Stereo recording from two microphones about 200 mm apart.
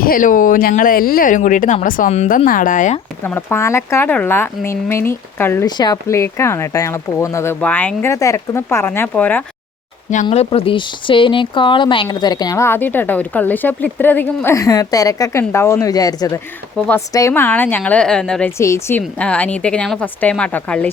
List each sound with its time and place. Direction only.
0.0 s speech: 45° left (ahead or behind)
3.2 s speech: 10° left (ahead or behind)
10.2 s speech: 30° left (ahead or behind)
16.7 s speech: 5° left (ahead or behind)
17.1 s speech: 15° left (ahead or behind)